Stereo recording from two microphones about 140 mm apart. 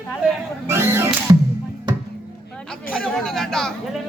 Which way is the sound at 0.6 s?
15° right (ahead or behind).